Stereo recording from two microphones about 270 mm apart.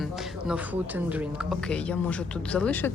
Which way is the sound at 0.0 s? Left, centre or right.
Centre.